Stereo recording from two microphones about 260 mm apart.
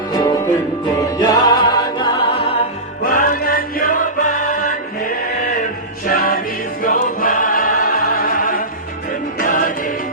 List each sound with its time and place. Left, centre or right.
0.1 s music: centre
3.1 s music: left
6.1 s music: left
6.8 s choir: left
9.4 s music: left